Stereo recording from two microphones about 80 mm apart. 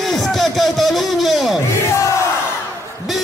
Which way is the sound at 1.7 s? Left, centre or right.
Left.